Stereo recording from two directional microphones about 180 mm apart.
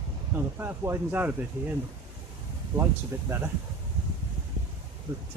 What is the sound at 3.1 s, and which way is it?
Speech, 15° right (ahead or behind).